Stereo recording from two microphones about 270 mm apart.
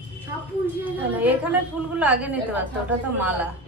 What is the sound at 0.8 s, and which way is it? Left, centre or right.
A woman's voice, centre.